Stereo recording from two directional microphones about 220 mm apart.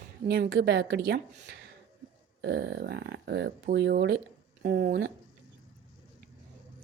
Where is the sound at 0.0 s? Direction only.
45° right (ahead or behind).